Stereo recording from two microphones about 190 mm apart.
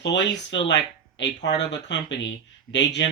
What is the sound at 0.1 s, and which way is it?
Speech, 70° left (ahead or behind).